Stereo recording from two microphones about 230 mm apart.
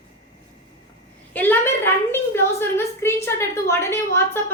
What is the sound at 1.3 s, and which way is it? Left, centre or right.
A woman's voice, centre.